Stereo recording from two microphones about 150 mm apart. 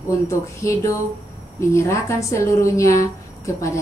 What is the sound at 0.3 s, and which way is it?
A woman's voice, 20° left (ahead or behind).